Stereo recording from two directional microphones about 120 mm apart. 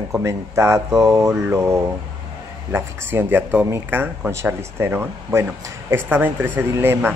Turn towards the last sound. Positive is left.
turn(degrees=-20)  # may be behind; listen again after turning